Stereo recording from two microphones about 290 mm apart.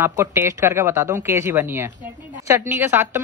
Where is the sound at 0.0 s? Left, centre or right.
Centre.